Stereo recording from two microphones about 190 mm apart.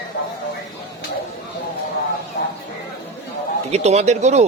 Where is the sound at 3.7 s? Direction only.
35° right (ahead or behind).